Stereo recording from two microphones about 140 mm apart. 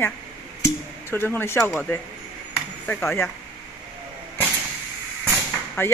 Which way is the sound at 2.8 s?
15° left (ahead or behind).